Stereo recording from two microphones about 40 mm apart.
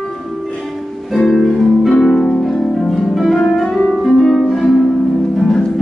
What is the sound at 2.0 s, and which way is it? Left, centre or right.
Harp, centre.